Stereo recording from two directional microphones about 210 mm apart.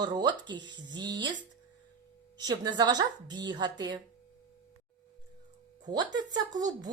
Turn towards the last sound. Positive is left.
turn(degrees=-20)  # may be behind; listen again after turning